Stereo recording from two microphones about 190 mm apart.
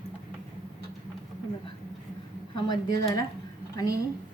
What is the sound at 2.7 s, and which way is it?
Speech, 20° left (ahead or behind).